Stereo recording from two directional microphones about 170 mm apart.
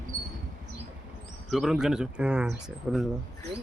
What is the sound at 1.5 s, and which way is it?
Speech, centre (ahead or behind).